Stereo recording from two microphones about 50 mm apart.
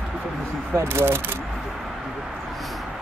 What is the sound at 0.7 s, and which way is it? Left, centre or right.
Speech, right.